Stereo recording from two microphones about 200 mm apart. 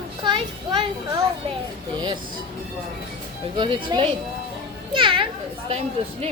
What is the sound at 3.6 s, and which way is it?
A child's voice, 25° right (ahead or behind).